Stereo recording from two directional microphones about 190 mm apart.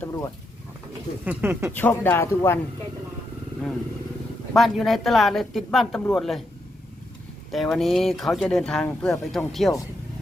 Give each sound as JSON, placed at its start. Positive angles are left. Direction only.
{"t": 0.0, "sound": "speech", "side_deg": 15}
{"t": 1.2, "sound": "speech", "side_deg": -10}
{"t": 1.7, "sound": "speech", "side_deg": 10}
{"t": 4.5, "sound": "speech", "side_deg": 0}
{"t": 7.5, "sound": "speech", "side_deg": 0}